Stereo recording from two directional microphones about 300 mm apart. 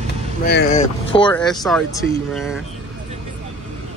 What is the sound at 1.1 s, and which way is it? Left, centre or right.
Boat, centre.